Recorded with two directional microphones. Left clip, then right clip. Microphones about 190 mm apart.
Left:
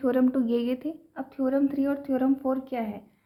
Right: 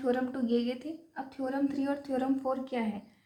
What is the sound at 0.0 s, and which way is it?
A woman's voice, 50° left (ahead or behind).